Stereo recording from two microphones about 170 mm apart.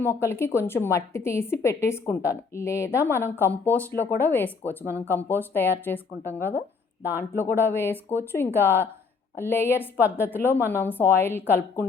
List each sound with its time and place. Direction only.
0.0 s a woman's voice: 15° left (ahead or behind)
7.2 s a woman's voice: 15° left (ahead or behind)